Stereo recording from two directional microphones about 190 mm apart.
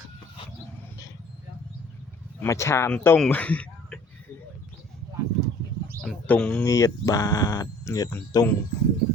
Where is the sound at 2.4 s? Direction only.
15° left (ahead or behind).